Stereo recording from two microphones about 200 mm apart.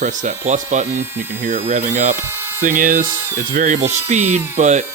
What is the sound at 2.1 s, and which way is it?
Speech, 10° right (ahead or behind).